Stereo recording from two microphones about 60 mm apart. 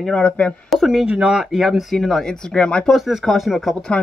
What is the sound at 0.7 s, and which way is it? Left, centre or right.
Speech, centre.